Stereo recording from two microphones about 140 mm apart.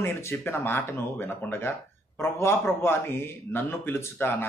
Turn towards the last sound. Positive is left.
turn(degrees=15)  # may be behind; listen again after turning